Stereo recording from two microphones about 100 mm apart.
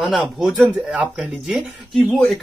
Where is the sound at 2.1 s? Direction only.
10° left (ahead or behind).